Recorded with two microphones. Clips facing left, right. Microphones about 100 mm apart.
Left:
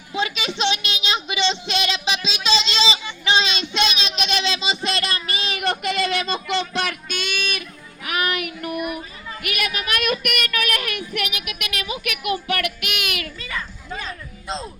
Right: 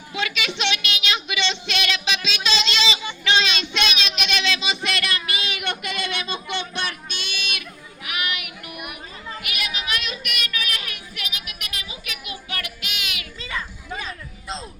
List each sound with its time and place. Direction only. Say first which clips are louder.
0.1 s a sound: left 2 dB; 30° left (ahead or behind)
3.2 s child singing: left 1 dB; 30° left (ahead or behind)
7.3 s music: left 5 dB; 50° left (ahead or behind)
8.0 s child singing: left 6 dB; 40° left (ahead or behind)
13.4 s children playing: even; 20° right (ahead or behind)
13.9 s music: left 1 dB; 5° right (ahead or behind)